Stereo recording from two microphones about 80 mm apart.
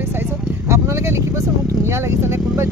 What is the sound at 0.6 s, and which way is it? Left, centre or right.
Speech, right.